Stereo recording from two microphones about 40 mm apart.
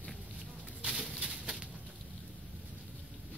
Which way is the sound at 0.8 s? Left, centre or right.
Right.